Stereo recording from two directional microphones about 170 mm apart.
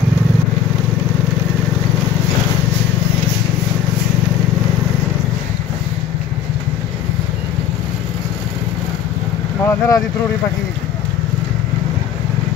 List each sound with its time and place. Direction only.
9.7 s speech: 20° left (ahead or behind)